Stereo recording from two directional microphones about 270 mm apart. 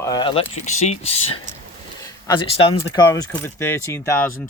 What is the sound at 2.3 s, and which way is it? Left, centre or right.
Speech, centre.